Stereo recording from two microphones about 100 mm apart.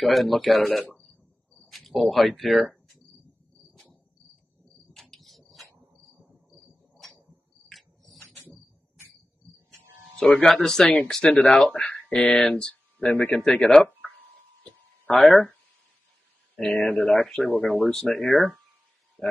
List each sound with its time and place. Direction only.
0.0 s speech: centre (ahead or behind)
0.9 s cricket: centre (ahead or behind)
7.7 s cricket: centre (ahead or behind)
10.1 s speech: 5° left (ahead or behind)
14.6 s a sound: 5° left (ahead or behind)
16.5 s speech: 5° left (ahead or behind)
16.8 s speech: 15° left (ahead or behind)
17.1 s speech: 5° left (ahead or behind)